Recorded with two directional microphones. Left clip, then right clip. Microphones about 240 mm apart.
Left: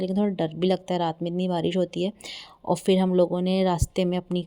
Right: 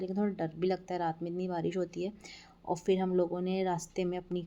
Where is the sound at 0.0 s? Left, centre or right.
Left.